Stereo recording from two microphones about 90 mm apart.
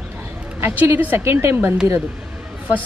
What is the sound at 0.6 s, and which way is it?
Speech, 25° right (ahead or behind).